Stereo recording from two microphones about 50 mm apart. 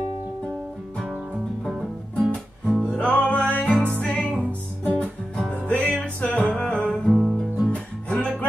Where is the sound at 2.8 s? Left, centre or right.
Left.